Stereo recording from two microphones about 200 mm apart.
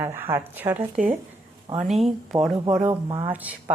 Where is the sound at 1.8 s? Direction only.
Centre (ahead or behind).